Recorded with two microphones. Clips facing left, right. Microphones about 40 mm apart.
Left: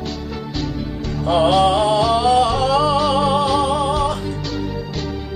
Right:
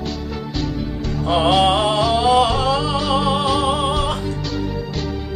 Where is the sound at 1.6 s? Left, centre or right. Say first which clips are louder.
Left 1 dB; right.